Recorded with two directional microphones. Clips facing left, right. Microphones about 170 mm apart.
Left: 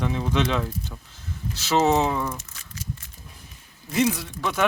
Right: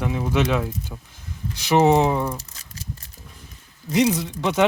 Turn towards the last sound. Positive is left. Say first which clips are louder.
# right 4 dB
turn(degrees=-20)  # may be behind; listen again after turning